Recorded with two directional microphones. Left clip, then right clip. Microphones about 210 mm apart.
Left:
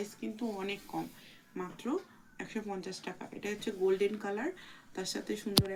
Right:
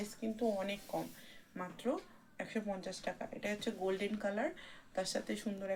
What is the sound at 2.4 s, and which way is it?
Speech, 40° right (ahead or behind).